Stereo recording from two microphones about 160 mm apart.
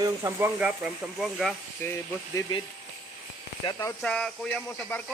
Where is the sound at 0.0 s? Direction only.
15° right (ahead or behind); by 1.5 s centre (ahead or behind).